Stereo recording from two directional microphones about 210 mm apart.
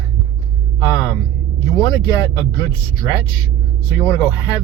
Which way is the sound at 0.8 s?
15° left (ahead or behind).